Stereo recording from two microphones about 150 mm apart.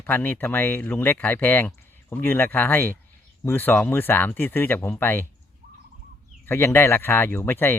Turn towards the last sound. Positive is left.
turn(degrees=15)  # may be behind; listen again after turning